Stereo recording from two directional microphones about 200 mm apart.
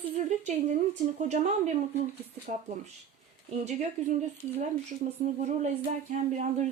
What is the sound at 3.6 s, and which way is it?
Speech, 35° right (ahead or behind).